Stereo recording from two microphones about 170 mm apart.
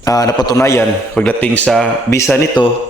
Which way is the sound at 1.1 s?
5° left (ahead or behind).